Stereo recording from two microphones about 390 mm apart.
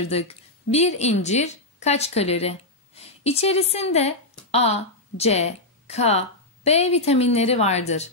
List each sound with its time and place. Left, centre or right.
0.1 s a woman's voice: centre